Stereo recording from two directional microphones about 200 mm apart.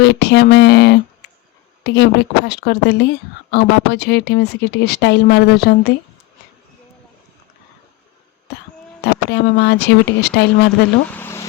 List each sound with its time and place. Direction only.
0.0 s speech: 60° left (ahead or behind)
9.3 s speech: 55° left (ahead or behind)
11.1 s a sound: 10° left (ahead or behind)